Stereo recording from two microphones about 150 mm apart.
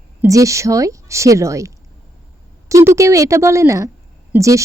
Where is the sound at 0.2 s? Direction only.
20° right (ahead or behind).